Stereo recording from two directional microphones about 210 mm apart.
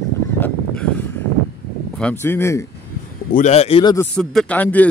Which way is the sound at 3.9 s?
5° left (ahead or behind).